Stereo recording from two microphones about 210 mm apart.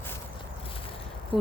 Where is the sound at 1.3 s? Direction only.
Centre (ahead or behind).